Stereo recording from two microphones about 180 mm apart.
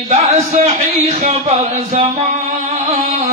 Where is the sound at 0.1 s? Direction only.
35° right (ahead or behind).